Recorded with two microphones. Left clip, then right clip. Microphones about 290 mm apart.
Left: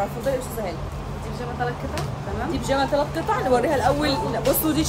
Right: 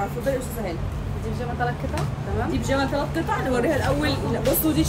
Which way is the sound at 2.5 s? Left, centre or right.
Centre.